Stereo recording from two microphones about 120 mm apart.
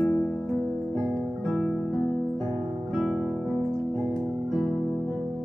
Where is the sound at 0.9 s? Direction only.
30° right (ahead or behind).